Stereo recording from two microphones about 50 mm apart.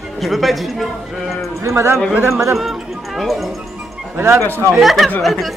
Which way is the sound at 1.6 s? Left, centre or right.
Right.